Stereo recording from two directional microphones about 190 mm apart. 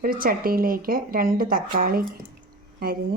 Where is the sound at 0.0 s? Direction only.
50° right (ahead or behind).